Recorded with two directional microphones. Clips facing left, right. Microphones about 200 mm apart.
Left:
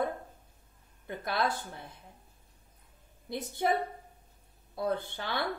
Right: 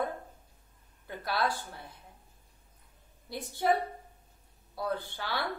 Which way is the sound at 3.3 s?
20° left (ahead or behind).